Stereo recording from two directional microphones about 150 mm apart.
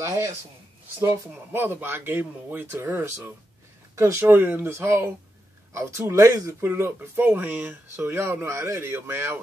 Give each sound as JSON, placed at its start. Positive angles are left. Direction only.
{"t": 0.0, "sound": "speech", "side_deg": -20}